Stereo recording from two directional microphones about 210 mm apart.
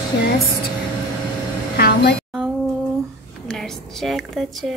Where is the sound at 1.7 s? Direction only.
45° left (ahead or behind).